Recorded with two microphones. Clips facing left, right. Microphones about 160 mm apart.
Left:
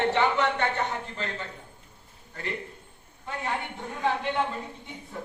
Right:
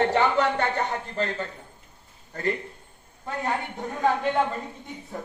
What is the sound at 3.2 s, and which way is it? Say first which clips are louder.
A woman's voice: right 3 dB; 40° right (ahead or behind).